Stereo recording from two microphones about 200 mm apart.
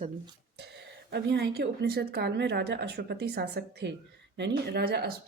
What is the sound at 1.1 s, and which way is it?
A woman's voice, 55° right (ahead or behind).